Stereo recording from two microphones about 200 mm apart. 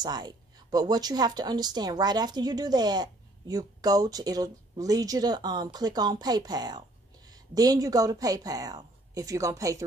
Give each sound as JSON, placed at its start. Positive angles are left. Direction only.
{"t": 0.0, "sound": "a woman's voice", "side_deg": -20}